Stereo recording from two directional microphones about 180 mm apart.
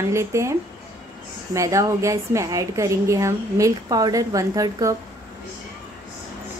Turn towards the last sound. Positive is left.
turn(degrees=-20)  # may be behind; listen again after turning